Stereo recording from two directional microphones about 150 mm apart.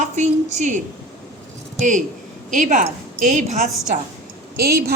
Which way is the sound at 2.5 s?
60° right (ahead or behind).